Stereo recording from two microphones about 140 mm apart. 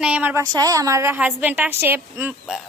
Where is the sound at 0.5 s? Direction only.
25° right (ahead or behind).